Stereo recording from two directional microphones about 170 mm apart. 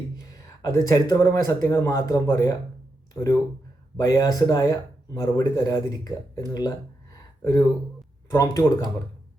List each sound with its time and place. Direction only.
0.3 s speech: 20° left (ahead or behind)
3.9 s speech: 20° left (ahead or behind)